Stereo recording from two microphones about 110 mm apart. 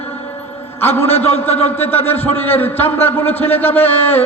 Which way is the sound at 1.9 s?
20° left (ahead or behind).